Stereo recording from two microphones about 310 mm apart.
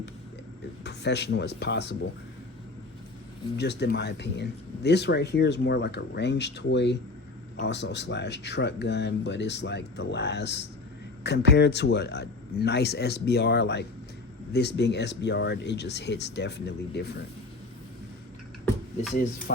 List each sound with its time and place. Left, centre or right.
0.9 s speech: left
3.6 s speech: left
19.1 s speech: left